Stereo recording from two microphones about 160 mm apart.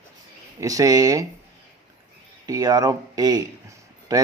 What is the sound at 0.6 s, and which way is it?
Speech, 20° right (ahead or behind).